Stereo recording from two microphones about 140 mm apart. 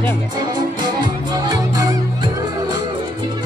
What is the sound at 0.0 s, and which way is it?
Music, 30° right (ahead or behind).